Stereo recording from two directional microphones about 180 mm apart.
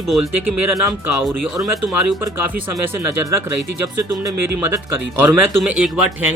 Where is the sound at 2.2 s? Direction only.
10° right (ahead or behind).